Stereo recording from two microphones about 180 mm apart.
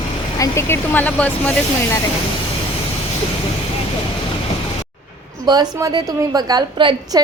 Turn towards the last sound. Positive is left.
turn(degrees=-25)  # may be behind; listen again after turning